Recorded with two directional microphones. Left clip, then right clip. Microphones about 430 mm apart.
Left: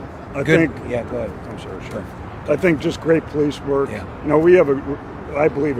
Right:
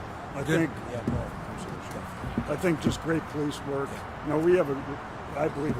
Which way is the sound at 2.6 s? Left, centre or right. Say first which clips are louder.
Left 9 dB; left.